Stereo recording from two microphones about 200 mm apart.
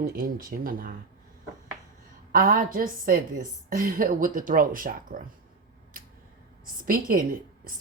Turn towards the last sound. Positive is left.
turn(degrees=-45)  # may be behind; listen again after turning